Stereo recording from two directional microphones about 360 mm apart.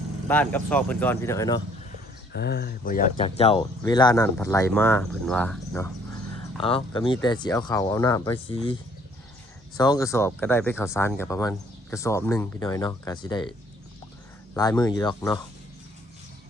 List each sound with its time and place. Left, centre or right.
0.3 s speech: centre
2.3 s speech: left
9.7 s speech: centre
14.5 s speech: centre